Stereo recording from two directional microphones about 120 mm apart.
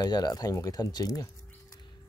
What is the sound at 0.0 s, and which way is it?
Speech, 35° left (ahead or behind).